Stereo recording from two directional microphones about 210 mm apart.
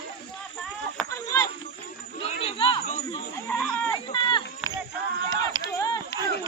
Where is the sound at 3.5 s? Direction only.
5° left (ahead or behind).